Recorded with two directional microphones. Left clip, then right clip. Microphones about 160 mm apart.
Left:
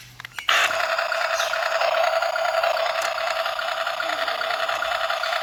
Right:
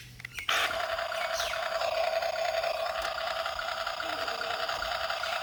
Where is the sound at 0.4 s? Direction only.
20° left (ahead or behind).